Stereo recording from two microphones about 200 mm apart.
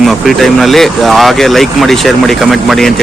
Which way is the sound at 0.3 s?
Centre (ahead or behind).